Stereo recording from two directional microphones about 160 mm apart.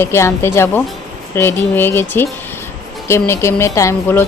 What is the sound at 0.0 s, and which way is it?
A woman's voice, 15° left (ahead or behind).